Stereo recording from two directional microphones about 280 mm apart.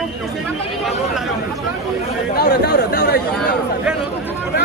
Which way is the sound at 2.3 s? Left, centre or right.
Left.